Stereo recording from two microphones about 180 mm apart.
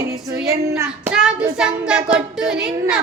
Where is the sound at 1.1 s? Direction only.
5° right (ahead or behind).